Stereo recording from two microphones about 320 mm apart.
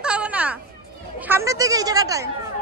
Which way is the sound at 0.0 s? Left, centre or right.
Centre.